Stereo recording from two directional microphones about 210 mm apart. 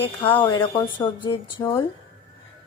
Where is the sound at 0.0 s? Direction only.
25° left (ahead or behind).